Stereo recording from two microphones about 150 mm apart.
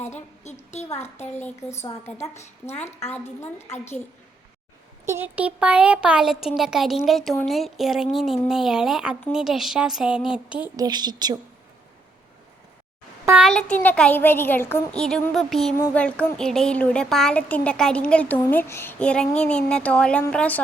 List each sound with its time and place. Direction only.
0.7 s a woman's voice: 50° left (ahead or behind)
0.9 s speech: 15° left (ahead or behind)
2.1 s a woman's voice: 45° left (ahead or behind)
3.0 s speech: 15° left (ahead or behind)
5.0 s speech: 15° right (ahead or behind)
10.8 s a woman's voice: 25° right (ahead or behind)
13.4 s speech: 5° left (ahead or behind)
14.9 s speech: 5° left (ahead or behind)